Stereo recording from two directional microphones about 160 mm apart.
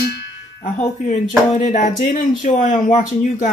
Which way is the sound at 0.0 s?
85° left.